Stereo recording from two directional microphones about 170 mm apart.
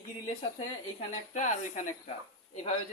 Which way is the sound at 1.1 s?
45° left (ahead or behind).